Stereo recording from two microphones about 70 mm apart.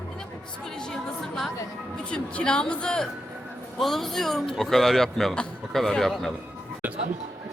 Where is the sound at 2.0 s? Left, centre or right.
Centre.